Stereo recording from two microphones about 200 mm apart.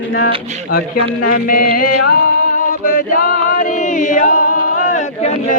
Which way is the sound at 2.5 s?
45° left (ahead or behind).